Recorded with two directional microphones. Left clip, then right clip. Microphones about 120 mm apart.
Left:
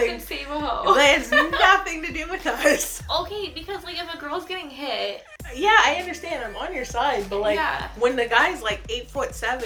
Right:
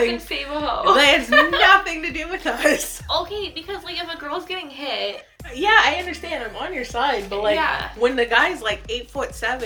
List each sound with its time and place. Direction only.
0.1 s a woman's voice: 20° left (ahead or behind)
0.9 s a woman's voice: 30° right (ahead or behind)
1.3 s a woman's voice: 20° left (ahead or behind)
1.6 s speech: 25° right (ahead or behind)
3.1 s a woman's voice: 25° left (ahead or behind)
5.5 s speech: 25° right (ahead or behind)
7.5 s a woman's voice: 20° left (ahead or behind)
8.0 s speech: 25° right (ahead or behind)